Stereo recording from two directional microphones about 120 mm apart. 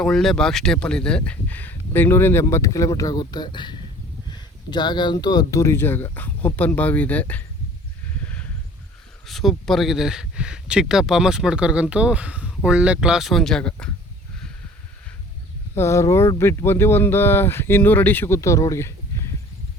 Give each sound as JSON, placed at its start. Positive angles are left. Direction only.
{"t": 0.0, "sound": "speech", "side_deg": 5}
{"t": 9.2, "sound": "speech", "side_deg": 0}
{"t": 15.7, "sound": "speech", "side_deg": 25}